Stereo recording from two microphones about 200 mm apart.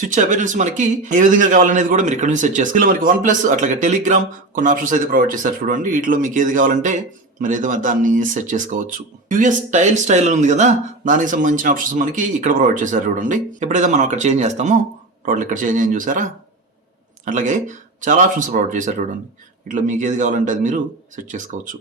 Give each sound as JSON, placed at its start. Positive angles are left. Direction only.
{"t": 0.0, "sound": "speech", "side_deg": -40}